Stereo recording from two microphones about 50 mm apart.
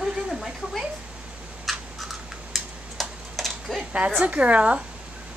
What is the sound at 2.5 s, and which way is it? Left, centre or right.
Tick-tock, centre.